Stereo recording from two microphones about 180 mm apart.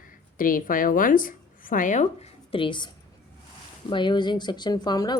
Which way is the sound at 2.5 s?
25° left (ahead or behind).